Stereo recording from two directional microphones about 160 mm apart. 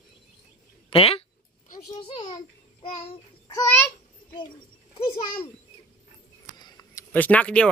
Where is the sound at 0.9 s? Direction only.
35° left (ahead or behind).